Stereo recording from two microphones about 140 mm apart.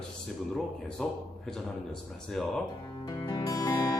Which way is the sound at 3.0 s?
30° left (ahead or behind).